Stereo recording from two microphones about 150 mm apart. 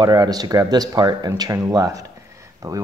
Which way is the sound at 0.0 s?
25° right (ahead or behind).